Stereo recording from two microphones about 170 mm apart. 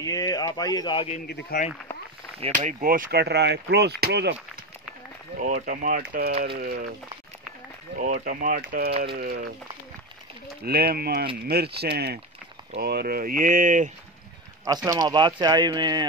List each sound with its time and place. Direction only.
0.0 s speech: 20° left (ahead or behind)
1.2 s speech: 65° left (ahead or behind)
2.8 s speech: 55° right (ahead or behind); by 4.4 s 75° right (ahead or behind)
5.4 s speech: 55° right (ahead or behind)
8.0 s speech: 50° right (ahead or behind)
10.6 s speech: 65° right (ahead or behind); by 13.9 s 50° right (ahead or behind)
14.9 s speech: 20° right (ahead or behind)